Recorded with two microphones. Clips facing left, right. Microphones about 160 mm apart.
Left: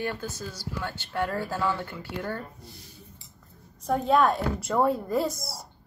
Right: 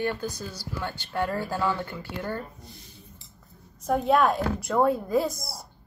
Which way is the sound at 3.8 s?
5° right (ahead or behind).